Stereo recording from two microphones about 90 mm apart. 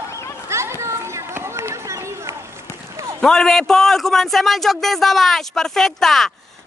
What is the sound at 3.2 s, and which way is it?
A man's voice, 5° left (ahead or behind).